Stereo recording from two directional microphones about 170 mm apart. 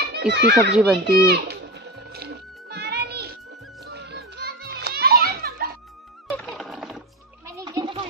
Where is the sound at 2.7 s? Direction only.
70° right (ahead or behind).